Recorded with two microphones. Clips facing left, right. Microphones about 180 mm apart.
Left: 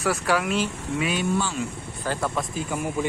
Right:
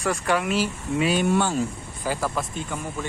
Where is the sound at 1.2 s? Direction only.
50° right (ahead or behind).